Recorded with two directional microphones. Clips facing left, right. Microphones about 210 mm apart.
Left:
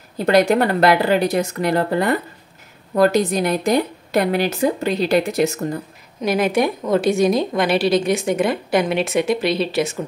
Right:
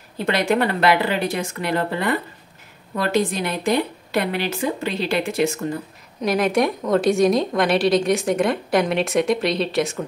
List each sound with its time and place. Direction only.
0.2 s a woman's voice: 40° left (ahead or behind)
6.2 s a woman's voice: centre (ahead or behind)